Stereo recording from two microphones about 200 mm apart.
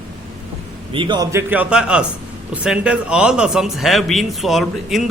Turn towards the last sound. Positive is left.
turn(degrees=0)  # may be behind; listen again after turning